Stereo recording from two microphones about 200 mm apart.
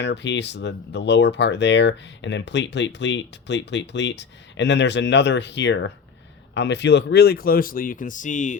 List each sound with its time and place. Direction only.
0.0 s speech: 60° left (ahead or behind); by 8.5 s 40° left (ahead or behind)